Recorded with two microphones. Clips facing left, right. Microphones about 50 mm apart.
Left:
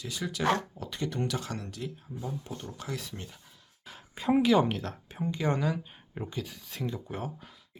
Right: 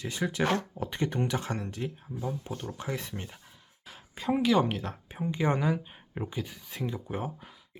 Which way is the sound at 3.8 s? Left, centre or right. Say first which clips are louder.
Left 2 dB; centre.